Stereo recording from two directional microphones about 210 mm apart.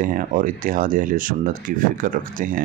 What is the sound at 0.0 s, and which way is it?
Speech, 40° right (ahead or behind).